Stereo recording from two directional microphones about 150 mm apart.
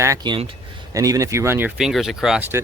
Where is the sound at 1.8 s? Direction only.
5° right (ahead or behind).